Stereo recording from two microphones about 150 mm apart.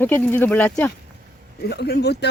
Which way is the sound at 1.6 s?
90° left.